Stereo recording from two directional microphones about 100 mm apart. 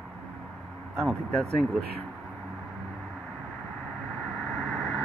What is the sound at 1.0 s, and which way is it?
Speech, 5° left (ahead or behind).